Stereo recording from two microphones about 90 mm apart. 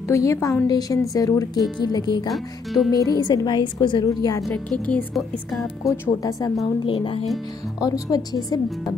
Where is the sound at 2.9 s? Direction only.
45° left (ahead or behind); by 4.1 s 60° left (ahead or behind).